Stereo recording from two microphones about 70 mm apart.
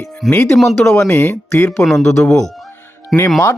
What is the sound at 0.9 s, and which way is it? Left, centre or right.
Speech, left.